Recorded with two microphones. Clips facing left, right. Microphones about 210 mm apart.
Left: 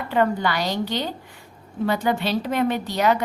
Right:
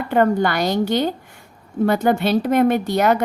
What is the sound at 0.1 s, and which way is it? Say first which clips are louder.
A woman's voice: right 4 dB; 50° right (ahead or behind).